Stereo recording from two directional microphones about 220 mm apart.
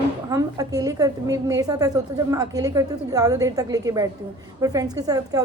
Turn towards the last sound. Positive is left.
turn(degrees=-15)  # may be behind; listen again after turning